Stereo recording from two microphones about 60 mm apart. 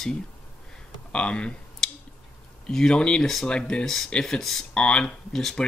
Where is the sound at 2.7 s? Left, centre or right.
Centre.